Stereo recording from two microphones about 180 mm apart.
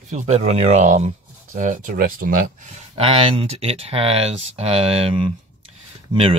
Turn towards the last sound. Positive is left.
turn(degrees=-30)  # may be behind; listen again after turning